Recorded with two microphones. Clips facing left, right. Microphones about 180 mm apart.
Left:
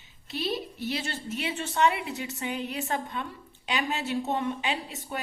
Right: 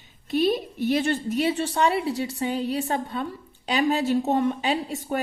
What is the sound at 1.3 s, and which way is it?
A woman's voice, 35° right (ahead or behind).